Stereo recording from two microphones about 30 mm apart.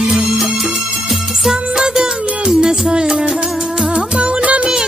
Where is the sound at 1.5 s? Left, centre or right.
Right.